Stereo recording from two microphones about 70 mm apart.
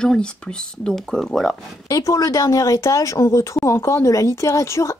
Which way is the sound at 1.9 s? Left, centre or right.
Left.